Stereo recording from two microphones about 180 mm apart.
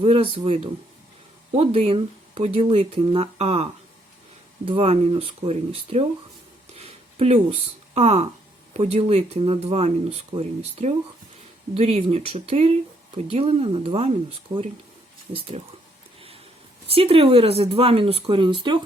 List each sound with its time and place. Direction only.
0.0 s speech: 30° right (ahead or behind)
6.7 s a sound: 35° right (ahead or behind)
7.9 s speech: 35° right (ahead or behind)
16.9 s speech: 30° right (ahead or behind)